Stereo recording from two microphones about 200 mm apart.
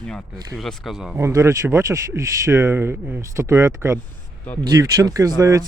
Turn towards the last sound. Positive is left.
turn(degrees=-15)  # may be behind; listen again after turning